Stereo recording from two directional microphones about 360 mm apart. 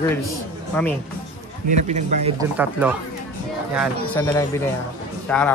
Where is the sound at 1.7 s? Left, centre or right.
Centre.